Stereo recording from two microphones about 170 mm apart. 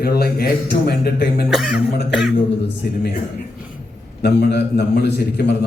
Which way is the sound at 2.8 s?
65° left (ahead or behind).